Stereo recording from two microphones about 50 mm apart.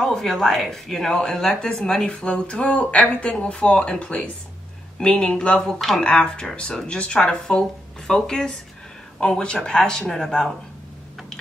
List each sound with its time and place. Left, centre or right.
0.0 s speech: centre